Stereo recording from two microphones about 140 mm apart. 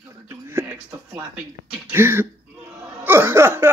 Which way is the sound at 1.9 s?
15° right (ahead or behind).